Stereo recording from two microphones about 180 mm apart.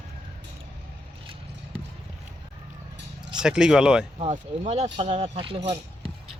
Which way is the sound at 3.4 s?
5° right (ahead or behind).